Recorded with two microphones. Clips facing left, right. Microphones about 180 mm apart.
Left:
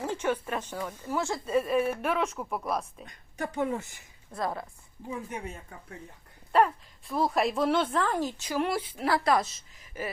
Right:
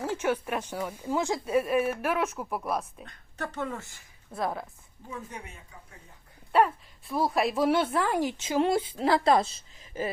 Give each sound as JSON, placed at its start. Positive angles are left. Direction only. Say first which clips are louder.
{"t": 0.0, "sound": "speech", "louder": "right 1 dB", "side_deg": -10}
{"t": 3.1, "sound": "speech", "louder": "left 4 dB", "side_deg": 15}
{"t": 4.3, "sound": "a woman's voice", "louder": "right 1 dB", "side_deg": -5}
{"t": 5.0, "sound": "speech", "louder": "left 4 dB", "side_deg": 20}
{"t": 7.1, "sound": "speech", "louder": "even", "side_deg": 0}